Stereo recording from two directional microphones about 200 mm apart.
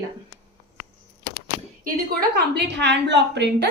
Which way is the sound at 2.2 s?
55° right (ahead or behind).